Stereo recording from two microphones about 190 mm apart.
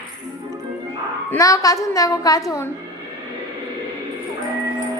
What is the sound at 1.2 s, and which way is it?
A woman's voice, 15° left (ahead or behind).